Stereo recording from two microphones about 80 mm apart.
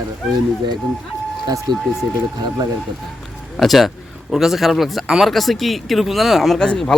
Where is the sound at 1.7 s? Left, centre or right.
Right.